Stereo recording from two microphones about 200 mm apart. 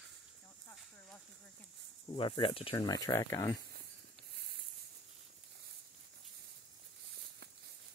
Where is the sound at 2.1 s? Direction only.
25° left (ahead or behind).